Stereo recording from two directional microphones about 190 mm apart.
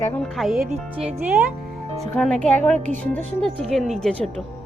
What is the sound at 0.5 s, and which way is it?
Speech, 40° right (ahead or behind).